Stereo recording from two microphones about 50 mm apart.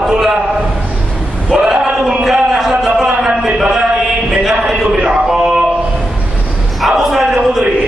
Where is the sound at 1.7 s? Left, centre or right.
Centre.